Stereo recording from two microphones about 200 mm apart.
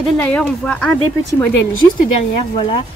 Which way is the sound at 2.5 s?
25° left (ahead or behind).